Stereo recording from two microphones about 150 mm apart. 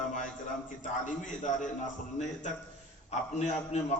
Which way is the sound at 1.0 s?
55° left (ahead or behind).